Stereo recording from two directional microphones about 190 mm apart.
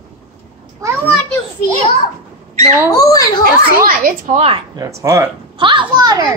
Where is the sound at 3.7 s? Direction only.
45° right (ahead or behind).